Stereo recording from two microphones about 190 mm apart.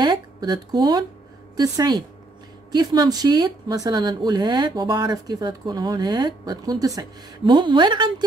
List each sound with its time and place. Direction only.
0.0 s speech: 20° right (ahead or behind)